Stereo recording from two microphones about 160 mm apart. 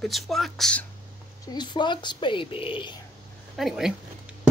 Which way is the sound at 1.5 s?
30° left (ahead or behind).